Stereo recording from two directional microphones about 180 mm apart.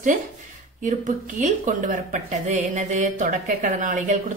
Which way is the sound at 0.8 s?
45° right (ahead or behind).